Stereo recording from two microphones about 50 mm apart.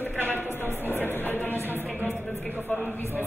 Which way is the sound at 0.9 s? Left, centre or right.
Left.